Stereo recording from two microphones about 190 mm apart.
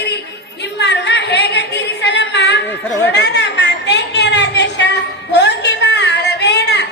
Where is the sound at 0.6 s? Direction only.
65° left (ahead or behind).